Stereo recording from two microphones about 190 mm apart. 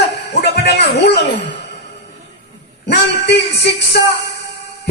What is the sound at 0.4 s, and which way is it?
Music, 60° left (ahead or behind).